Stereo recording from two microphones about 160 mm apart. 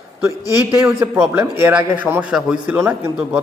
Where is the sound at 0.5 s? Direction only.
20° right (ahead or behind).